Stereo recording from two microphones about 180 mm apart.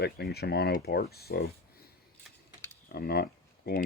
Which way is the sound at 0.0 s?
60° left (ahead or behind).